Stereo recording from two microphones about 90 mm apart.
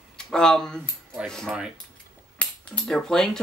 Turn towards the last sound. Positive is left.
turn(degrees=5)  # may be behind; listen again after turning